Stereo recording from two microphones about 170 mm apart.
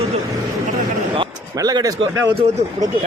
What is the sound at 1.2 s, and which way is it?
A man's voice, 25° right (ahead or behind).